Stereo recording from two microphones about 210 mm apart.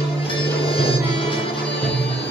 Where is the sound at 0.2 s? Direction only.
25° left (ahead or behind).